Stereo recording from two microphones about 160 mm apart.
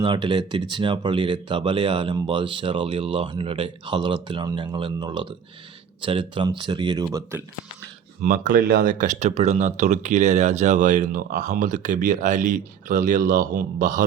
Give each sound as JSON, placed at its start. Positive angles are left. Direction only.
{"t": 0.0, "sound": "speech", "side_deg": -30}
{"t": 8.2, "sound": "speech", "side_deg": -55}